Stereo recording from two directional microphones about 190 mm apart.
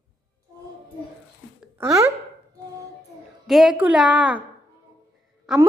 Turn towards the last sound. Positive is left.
turn(degrees=-5)  # may be behind; listen again after turning